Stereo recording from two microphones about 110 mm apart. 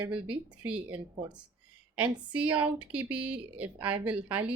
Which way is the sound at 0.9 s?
45° right (ahead or behind).